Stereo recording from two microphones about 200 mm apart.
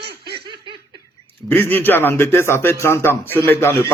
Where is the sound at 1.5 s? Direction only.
10° left (ahead or behind).